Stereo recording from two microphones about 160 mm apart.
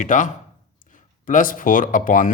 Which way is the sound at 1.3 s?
55° left (ahead or behind).